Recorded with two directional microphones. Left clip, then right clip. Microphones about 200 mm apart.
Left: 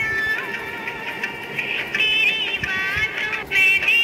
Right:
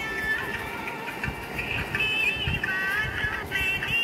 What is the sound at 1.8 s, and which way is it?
Music, 15° left (ahead or behind).